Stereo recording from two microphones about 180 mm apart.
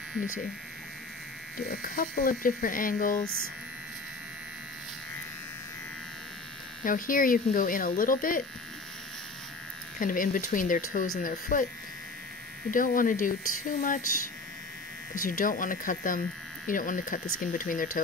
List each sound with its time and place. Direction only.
1.7 s speech: 55° left (ahead or behind)
6.8 s speech: 50° left (ahead or behind)
9.9 s speech: 50° left (ahead or behind)
12.7 s speech: 50° left (ahead or behind)
15.1 s speech: 50° left (ahead or behind)